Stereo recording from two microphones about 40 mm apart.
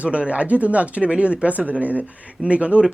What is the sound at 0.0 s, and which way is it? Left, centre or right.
Speech, right.